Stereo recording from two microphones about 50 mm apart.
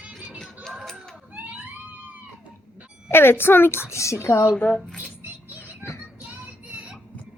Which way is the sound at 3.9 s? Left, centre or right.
Left.